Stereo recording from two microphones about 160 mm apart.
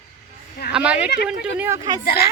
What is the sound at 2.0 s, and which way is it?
Speech, 75° left (ahead or behind).